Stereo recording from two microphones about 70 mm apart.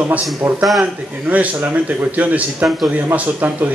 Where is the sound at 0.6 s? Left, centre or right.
Centre.